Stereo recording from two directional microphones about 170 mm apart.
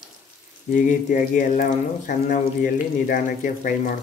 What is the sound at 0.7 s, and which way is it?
Speech, 50° left (ahead or behind).